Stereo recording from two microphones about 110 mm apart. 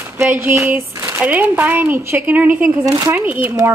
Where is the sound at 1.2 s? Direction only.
15° right (ahead or behind).